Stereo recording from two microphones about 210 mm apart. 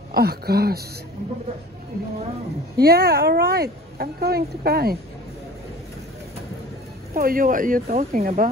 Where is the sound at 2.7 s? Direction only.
45° right (ahead or behind).